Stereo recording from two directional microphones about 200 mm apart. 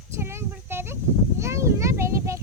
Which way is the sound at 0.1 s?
15° right (ahead or behind).